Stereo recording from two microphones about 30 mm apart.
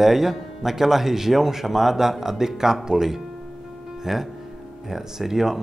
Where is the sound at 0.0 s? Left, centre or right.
Centre.